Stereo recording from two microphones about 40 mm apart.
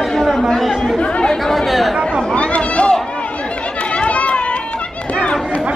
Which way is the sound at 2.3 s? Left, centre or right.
Left.